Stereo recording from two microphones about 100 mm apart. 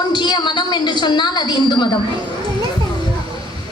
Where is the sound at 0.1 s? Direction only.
50° left (ahead or behind).